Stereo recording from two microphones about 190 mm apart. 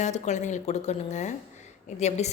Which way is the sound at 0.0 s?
40° left (ahead or behind).